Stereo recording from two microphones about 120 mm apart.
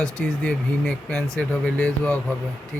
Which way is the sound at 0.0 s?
5° left (ahead or behind).